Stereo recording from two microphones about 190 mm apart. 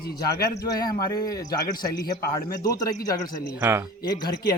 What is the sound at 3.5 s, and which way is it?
Speech, 10° right (ahead or behind).